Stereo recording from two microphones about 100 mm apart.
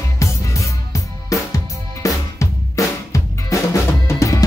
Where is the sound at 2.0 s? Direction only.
35° left (ahead or behind).